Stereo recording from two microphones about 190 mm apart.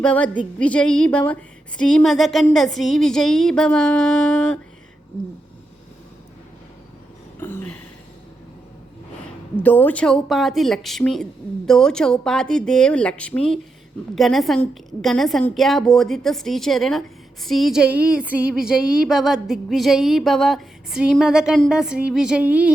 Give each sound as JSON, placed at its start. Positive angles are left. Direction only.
{"t": 0.0, "sound": "a woman's voice", "side_deg": 5}
{"t": 7.3, "sound": "a sound", "side_deg": 10}
{"t": 9.6, "sound": "a woman's voice", "side_deg": 10}